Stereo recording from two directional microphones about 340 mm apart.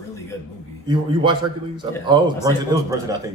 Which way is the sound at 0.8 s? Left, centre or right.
Centre.